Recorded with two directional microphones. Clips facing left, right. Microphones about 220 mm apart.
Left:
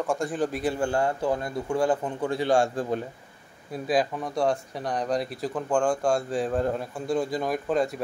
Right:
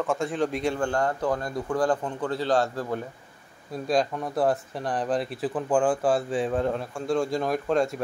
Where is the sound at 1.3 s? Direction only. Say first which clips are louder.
Even; 25° left (ahead or behind).